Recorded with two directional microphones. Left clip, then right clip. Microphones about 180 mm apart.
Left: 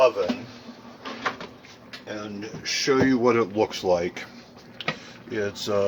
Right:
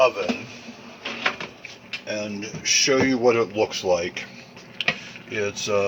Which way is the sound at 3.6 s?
35° left (ahead or behind).